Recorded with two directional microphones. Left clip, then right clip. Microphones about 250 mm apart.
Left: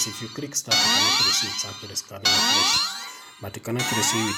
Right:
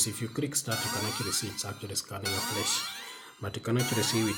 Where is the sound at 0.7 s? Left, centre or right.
Left.